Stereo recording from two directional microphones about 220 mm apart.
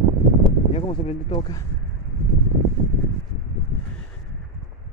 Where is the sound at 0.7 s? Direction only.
25° left (ahead or behind).